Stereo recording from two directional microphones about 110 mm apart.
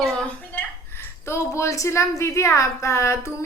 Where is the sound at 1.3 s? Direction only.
25° left (ahead or behind).